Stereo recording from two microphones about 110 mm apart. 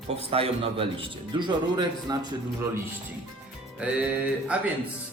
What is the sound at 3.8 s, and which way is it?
Music, 10° right (ahead or behind).